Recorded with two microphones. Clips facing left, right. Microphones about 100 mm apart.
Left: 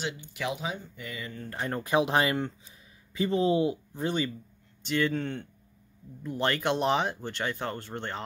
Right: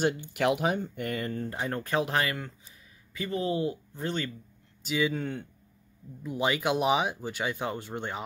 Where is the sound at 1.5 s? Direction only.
Centre (ahead or behind).